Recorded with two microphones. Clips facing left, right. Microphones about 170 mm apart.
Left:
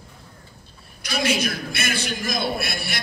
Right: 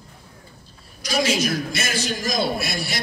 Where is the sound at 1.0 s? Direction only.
60° left (ahead or behind).